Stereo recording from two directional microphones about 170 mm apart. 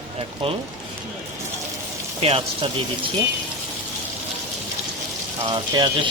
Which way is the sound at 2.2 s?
35° right (ahead or behind).